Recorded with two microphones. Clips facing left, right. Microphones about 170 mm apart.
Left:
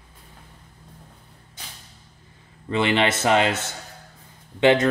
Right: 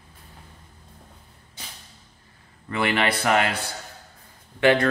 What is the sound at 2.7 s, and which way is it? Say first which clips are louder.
A man's voice: left 3 dB; 20° left (ahead or behind).